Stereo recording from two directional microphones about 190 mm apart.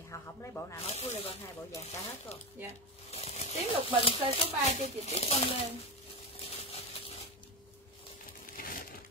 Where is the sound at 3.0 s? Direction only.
35° left (ahead or behind).